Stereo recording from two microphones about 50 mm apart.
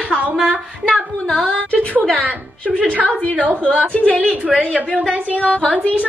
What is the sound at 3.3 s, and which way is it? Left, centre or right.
Speech, right.